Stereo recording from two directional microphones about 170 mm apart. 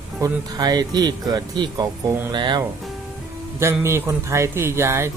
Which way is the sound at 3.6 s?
15° right (ahead or behind).